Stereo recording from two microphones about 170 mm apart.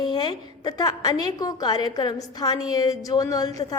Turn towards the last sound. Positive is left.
turn(degrees=20)  # may be behind; listen again after turning